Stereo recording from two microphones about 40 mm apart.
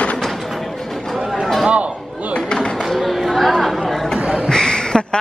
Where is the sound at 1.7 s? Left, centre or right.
Right.